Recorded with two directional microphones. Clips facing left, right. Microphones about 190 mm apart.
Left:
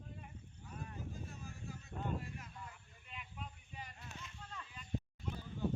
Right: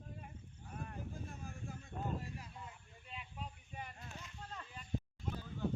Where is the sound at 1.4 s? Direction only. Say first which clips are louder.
Right 1 dB; 50° right (ahead or behind).